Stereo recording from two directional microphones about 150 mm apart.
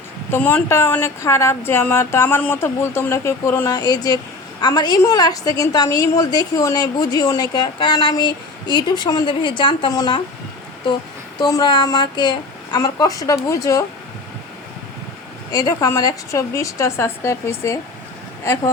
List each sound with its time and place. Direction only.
0.3 s a woman's voice: 10° left (ahead or behind); by 10.2 s 30° left (ahead or behind)
11.3 s a woman's voice: 30° left (ahead or behind)
15.5 s a woman's voice: 25° left (ahead or behind)